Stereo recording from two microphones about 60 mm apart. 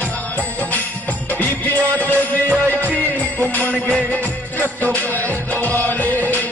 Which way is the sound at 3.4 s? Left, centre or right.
Left.